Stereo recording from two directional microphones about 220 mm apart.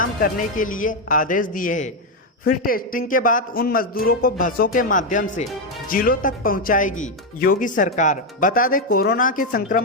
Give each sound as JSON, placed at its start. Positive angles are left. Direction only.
{"t": 0.0, "sound": "speech", "side_deg": 40}